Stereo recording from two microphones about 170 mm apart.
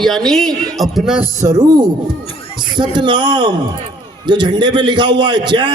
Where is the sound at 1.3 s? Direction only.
20° right (ahead or behind).